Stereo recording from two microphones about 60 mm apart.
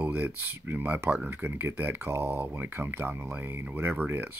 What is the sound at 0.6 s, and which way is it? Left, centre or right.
Speech, right.